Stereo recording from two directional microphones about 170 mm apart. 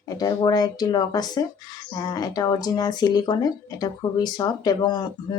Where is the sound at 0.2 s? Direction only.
25° left (ahead or behind).